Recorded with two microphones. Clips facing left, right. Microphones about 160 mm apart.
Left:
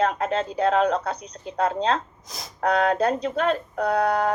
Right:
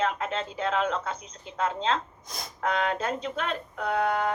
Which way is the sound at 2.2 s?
Centre (ahead or behind).